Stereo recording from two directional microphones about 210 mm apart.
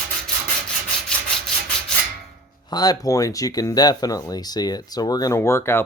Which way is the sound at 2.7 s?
20° left (ahead or behind).